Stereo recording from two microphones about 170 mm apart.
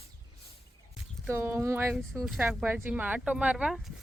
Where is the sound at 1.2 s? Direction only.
15° right (ahead or behind).